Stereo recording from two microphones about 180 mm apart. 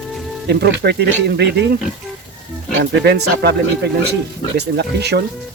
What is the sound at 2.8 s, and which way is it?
Speech, 70° right (ahead or behind).